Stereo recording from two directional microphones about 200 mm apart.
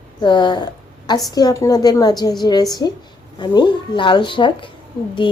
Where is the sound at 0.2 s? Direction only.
20° left (ahead or behind).